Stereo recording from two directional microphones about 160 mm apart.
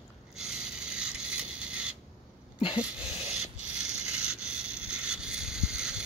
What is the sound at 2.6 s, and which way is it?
Sneeze, 35° left (ahead or behind).